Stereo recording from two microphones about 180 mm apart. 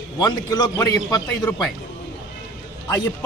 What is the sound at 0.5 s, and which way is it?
Speech, 20° left (ahead or behind).